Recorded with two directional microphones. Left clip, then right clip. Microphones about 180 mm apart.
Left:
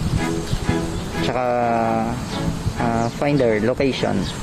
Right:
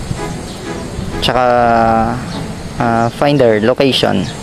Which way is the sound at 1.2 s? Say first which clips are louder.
Right 9 dB; 15° right (ahead or behind).